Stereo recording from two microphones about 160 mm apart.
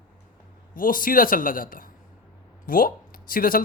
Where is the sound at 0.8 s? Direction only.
60° left (ahead or behind).